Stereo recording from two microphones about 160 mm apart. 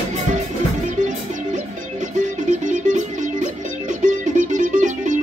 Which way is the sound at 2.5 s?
50° right (ahead or behind).